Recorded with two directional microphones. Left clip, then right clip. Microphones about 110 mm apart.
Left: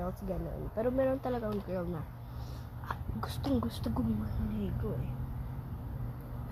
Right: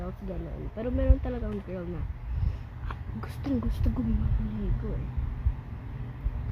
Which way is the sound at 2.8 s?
30° right (ahead or behind).